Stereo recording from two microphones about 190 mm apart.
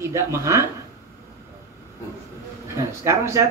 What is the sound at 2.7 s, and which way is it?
Chuckle, 15° right (ahead or behind).